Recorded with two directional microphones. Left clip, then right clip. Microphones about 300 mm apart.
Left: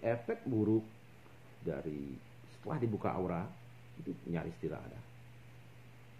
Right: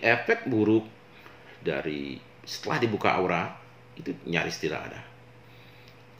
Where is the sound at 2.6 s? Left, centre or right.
Centre.